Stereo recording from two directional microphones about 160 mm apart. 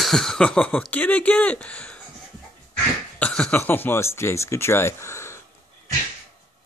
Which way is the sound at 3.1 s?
5° left (ahead or behind).